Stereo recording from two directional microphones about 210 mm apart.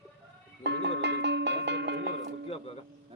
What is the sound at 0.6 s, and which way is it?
Music, 55° right (ahead or behind).